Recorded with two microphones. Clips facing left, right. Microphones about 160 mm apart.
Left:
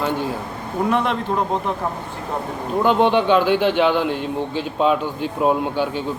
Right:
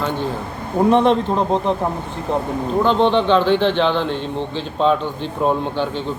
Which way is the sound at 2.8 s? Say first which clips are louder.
Even; 10° left (ahead or behind).